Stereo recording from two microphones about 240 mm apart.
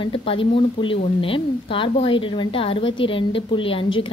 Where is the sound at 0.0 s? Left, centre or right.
Left.